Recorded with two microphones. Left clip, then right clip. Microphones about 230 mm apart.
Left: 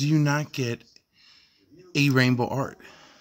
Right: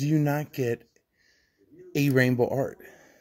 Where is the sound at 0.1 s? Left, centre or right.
Centre.